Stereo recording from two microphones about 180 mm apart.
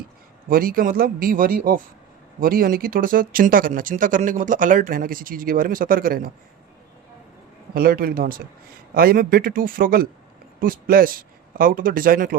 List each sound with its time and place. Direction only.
0.4 s speech: 50° right (ahead or behind)
7.7 s a man's voice: 55° right (ahead or behind)